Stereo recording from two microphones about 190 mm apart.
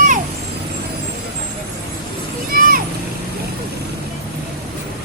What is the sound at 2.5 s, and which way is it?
Vehicle, 50° right (ahead or behind).